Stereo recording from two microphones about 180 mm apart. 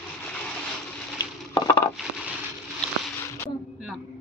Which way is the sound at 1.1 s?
20° left (ahead or behind).